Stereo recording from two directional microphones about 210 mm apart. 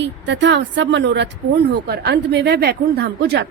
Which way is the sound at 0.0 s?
60° right (ahead or behind).